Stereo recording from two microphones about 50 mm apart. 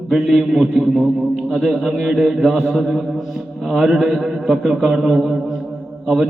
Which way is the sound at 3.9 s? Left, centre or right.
Centre.